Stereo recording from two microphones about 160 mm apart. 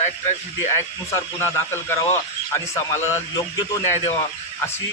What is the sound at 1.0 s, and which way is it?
Speech, 15° left (ahead or behind).